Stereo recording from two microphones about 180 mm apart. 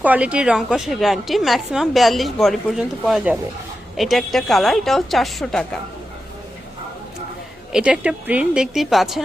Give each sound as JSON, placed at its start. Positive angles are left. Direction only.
{"t": 0.0, "sound": "a woman's voice", "side_deg": -5}
{"t": 7.7, "sound": "a woman's voice", "side_deg": -5}